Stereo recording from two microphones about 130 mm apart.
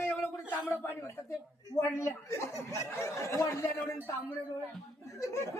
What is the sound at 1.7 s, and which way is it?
A man's voice, 20° left (ahead or behind).